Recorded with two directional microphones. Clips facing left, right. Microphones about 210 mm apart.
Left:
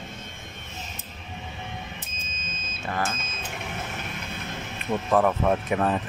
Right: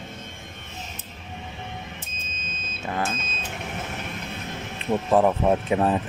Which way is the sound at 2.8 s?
20° right (ahead or behind).